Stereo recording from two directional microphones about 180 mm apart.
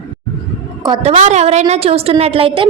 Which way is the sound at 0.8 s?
30° right (ahead or behind).